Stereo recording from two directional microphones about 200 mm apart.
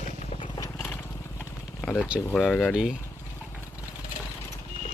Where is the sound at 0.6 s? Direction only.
15° left (ahead or behind).